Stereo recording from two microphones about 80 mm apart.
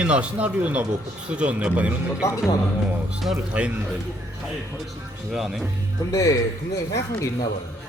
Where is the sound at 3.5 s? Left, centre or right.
Centre.